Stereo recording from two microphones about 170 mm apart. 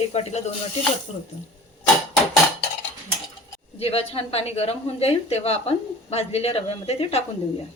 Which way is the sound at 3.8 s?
35° left (ahead or behind).